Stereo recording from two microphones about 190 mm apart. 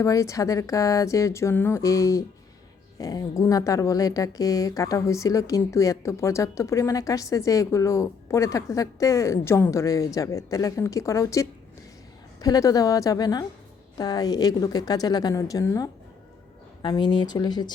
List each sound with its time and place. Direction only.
0.0 s a woman's voice: 15° left (ahead or behind)